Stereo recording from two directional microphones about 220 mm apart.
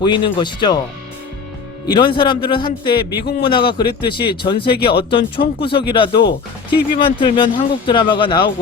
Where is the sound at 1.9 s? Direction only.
20° left (ahead or behind).